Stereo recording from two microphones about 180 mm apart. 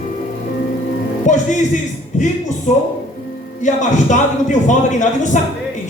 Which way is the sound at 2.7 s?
40° left (ahead or behind).